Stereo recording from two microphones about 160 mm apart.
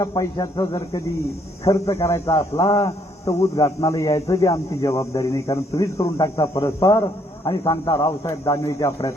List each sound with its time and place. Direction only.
0.0 s speech: 25° left (ahead or behind)